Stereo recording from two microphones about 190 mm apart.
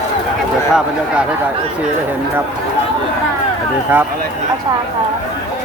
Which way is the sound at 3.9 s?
10° right (ahead or behind).